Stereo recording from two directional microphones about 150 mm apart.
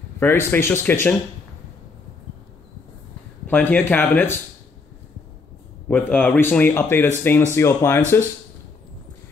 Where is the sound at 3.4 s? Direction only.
15° left (ahead or behind).